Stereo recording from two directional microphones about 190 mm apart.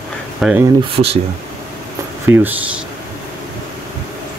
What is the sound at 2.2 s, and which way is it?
Speech, 10° right (ahead or behind).